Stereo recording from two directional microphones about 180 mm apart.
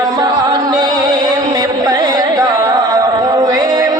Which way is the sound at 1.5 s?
20° right (ahead or behind).